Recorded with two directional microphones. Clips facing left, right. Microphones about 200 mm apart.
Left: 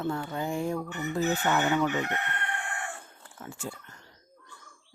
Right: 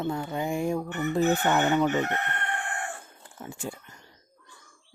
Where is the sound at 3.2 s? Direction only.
15° right (ahead or behind).